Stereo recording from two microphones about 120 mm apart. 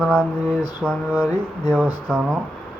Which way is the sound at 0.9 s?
10° left (ahead or behind).